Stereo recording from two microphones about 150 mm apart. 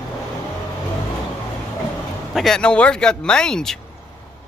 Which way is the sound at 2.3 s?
Centre (ahead or behind).